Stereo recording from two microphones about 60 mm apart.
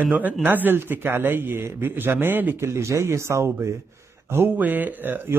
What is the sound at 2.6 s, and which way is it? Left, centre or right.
Speech, right.